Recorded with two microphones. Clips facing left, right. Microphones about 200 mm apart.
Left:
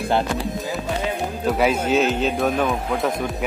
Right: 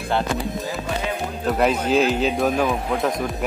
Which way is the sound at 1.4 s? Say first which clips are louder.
Even; 5° left (ahead or behind).